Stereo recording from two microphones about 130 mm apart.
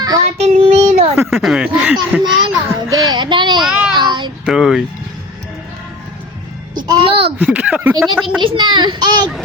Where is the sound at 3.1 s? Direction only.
35° right (ahead or behind).